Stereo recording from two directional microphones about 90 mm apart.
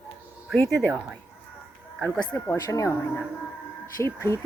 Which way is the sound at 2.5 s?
40° left (ahead or behind).